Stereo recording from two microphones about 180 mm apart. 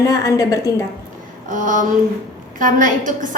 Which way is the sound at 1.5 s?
45° right (ahead or behind).